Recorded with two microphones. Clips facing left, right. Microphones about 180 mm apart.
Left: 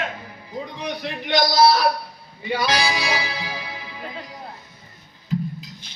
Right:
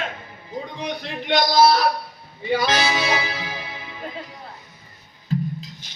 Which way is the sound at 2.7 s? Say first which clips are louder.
Right 1 dB; 20° right (ahead or behind).